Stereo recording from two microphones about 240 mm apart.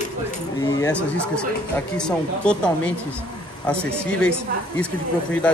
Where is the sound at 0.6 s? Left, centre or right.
Centre.